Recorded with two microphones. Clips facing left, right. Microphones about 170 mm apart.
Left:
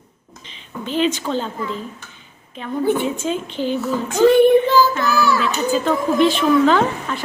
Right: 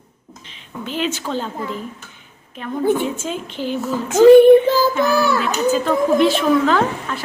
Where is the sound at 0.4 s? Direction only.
5° right (ahead or behind).